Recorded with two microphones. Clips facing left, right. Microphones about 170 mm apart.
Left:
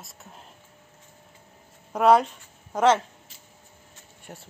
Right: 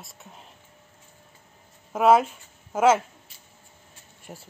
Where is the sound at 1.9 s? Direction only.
5° right (ahead or behind).